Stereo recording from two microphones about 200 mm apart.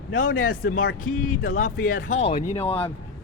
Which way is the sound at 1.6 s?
40° left (ahead or behind).